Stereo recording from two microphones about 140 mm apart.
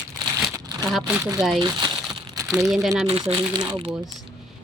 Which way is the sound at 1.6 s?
30° right (ahead or behind).